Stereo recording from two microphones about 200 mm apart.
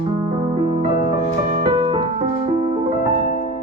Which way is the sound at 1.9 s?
30° right (ahead or behind).